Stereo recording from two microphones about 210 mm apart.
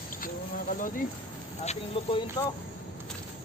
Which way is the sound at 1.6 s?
25° left (ahead or behind).